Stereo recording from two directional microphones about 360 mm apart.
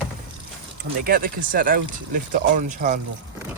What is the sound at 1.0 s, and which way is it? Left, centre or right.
Speech, right.